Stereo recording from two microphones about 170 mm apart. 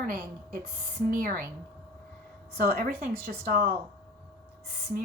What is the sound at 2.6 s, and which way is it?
Speech, 65° right (ahead or behind).